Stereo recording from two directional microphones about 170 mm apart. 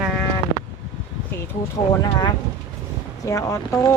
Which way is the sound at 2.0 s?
25° left (ahead or behind).